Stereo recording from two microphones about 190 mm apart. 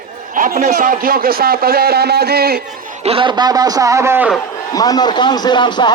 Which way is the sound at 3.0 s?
25° right (ahead or behind).